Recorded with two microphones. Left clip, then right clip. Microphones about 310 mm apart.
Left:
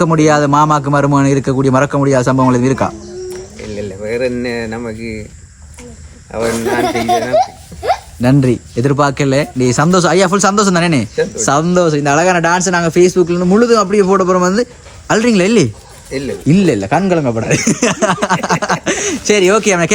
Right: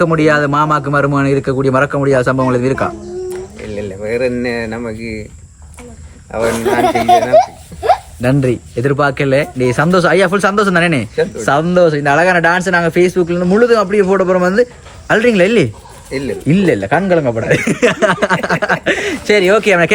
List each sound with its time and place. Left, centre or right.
0.0 s a man's voice: centre
3.7 s speech: centre
6.3 s speech: centre
6.8 s speech: centre
8.2 s speech: centre
16.0 s speech: centre
16.5 s speech: centre